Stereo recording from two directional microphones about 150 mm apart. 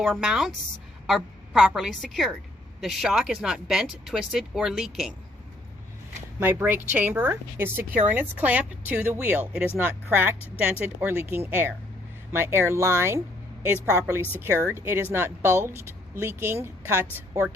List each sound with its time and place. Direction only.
0.0 s speech: centre (ahead or behind)
6.4 s speech: 15° right (ahead or behind)